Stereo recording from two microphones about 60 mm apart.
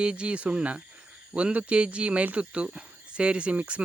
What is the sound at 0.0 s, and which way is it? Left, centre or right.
Speech, centre.